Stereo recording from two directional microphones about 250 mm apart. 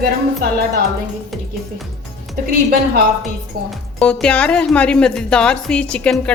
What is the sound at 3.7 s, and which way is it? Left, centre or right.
Speech, centre.